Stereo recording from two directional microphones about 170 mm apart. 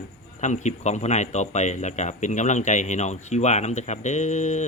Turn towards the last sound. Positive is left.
turn(degrees=45)  # may be behind; listen again after turning